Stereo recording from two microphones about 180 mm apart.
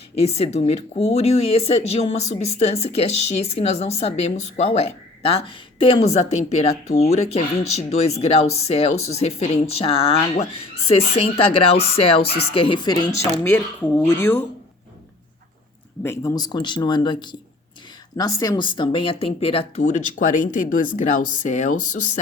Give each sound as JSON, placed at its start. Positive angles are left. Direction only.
{"t": 0.2, "sound": "speech", "side_deg": 35}
{"t": 16.0, "sound": "speech", "side_deg": 20}